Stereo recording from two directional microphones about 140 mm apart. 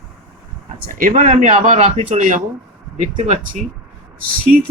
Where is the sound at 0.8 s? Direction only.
75° right (ahead or behind).